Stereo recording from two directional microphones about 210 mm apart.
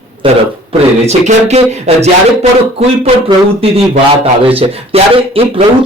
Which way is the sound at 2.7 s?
30° right (ahead or behind).